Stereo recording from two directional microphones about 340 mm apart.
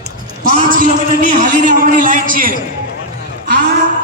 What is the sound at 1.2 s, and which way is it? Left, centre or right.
A man's voice, right.